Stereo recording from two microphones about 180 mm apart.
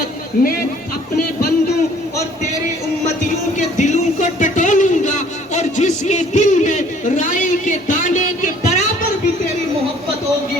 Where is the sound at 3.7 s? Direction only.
40° left (ahead or behind).